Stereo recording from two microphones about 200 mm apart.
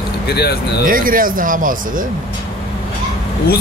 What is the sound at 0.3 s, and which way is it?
Speech, 55° left (ahead or behind).